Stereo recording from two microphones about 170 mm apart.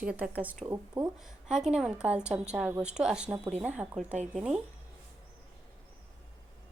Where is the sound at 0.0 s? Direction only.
10° right (ahead or behind).